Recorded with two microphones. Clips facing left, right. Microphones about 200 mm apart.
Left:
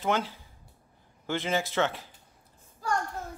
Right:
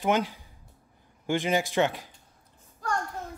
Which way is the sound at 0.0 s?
15° right (ahead or behind).